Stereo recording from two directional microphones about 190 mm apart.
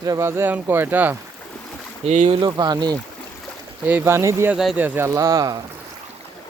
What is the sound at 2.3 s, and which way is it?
Speech, 25° right (ahead or behind).